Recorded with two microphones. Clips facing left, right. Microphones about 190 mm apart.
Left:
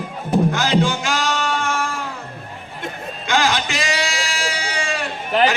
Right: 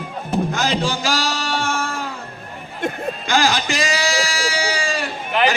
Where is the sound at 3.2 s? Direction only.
35° right (ahead or behind).